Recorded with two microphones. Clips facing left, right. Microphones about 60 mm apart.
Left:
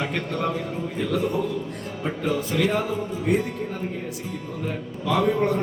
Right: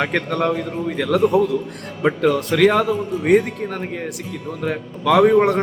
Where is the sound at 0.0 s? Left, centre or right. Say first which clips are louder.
Right 6 dB; right.